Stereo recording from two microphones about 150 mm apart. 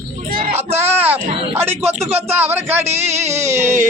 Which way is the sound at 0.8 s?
15° right (ahead or behind).